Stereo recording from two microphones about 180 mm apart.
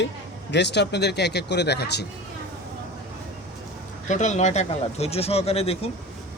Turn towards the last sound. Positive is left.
turn(degrees=35)  # may be behind; listen again after turning